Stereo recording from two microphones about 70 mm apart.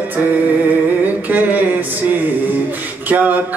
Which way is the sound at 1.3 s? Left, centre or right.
Right.